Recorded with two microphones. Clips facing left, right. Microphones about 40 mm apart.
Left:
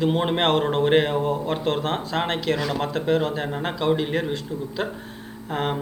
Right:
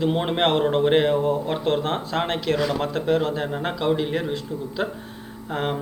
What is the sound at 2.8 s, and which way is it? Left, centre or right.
Speech, left.